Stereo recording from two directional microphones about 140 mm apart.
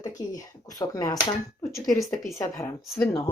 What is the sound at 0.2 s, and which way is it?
Speech, 25° left (ahead or behind).